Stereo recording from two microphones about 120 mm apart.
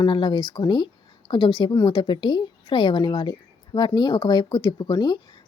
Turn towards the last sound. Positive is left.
turn(degrees=35)  # may be behind; listen again after turning